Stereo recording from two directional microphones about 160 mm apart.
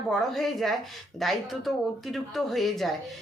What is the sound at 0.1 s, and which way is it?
Speech, centre (ahead or behind).